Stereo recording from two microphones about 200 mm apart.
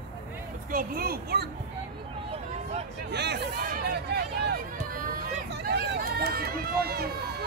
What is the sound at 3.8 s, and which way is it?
Hubbub, 50° right (ahead or behind).